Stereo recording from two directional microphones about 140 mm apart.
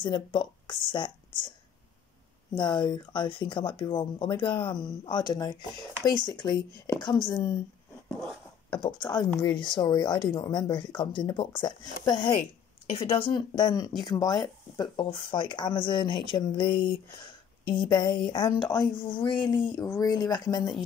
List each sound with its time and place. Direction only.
0.0 s speech: 35° left (ahead or behind)
2.5 s speech: 35° left (ahead or behind)
8.6 s speech: 35° left (ahead or behind)
13.3 s speech: 30° left (ahead or behind)
16.7 s speech: 90° left
17.8 s a woman's voice: 30° left (ahead or behind)